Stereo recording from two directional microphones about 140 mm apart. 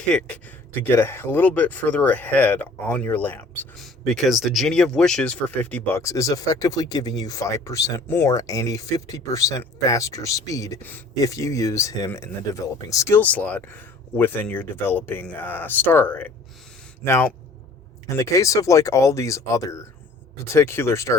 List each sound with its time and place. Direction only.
0.1 s speech: 5° left (ahead or behind)
3.8 s speech: centre (ahead or behind); by 21.2 s 20° left (ahead or behind)